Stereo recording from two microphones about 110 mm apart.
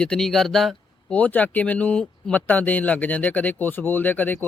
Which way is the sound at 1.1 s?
15° left (ahead or behind).